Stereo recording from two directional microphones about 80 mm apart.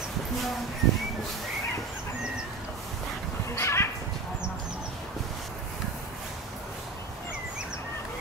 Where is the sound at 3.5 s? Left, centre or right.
Left.